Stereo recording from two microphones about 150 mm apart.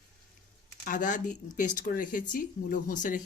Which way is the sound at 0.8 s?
60° left (ahead or behind).